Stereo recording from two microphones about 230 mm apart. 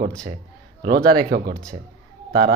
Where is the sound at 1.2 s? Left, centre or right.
Right.